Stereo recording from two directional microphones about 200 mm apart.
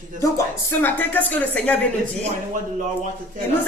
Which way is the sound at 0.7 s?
10° left (ahead or behind).